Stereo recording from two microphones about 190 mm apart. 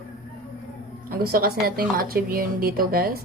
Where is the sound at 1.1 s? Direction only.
50° right (ahead or behind).